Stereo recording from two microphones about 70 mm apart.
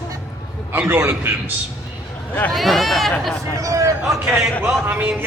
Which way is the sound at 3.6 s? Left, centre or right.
Right.